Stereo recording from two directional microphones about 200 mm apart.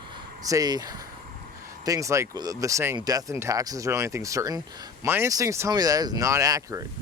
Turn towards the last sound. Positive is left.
turn(degrees=-15)  # may be behind; listen again after turning